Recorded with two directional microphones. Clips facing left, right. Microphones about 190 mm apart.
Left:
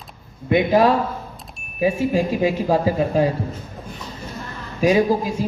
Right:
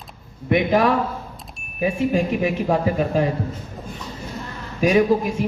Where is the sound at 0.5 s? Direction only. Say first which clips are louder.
Left 2 dB; 25° left (ahead or behind).